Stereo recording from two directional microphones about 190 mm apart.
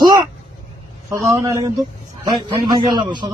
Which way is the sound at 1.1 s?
15° right (ahead or behind).